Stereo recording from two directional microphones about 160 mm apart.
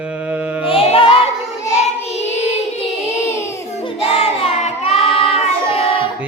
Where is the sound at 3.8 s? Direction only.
35° left (ahead or behind).